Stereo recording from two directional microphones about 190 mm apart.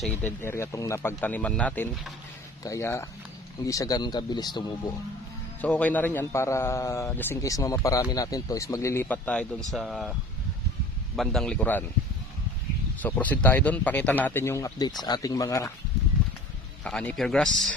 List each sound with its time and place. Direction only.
0.0 s a man's voice: 10° left (ahead or behind)
5.6 s a man's voice: 5° left (ahead or behind)
11.2 s speech: centre (ahead or behind)
13.0 s a man's voice: 10° left (ahead or behind)
16.8 s speech: 5° left (ahead or behind)